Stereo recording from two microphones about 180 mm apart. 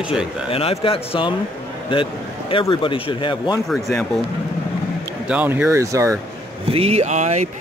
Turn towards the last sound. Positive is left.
turn(degrees=-40)  # may be behind; listen again after turning